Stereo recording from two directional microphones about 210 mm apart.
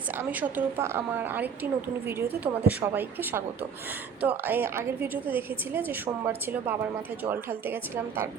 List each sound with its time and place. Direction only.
0.1 s a woman's voice: 10° right (ahead or behind)